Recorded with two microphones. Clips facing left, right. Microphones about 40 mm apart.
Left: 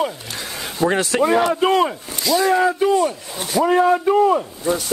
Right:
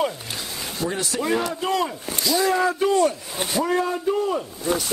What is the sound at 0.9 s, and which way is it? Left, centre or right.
Speech, left.